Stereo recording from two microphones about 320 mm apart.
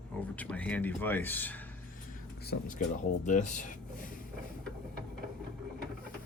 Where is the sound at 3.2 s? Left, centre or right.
Left.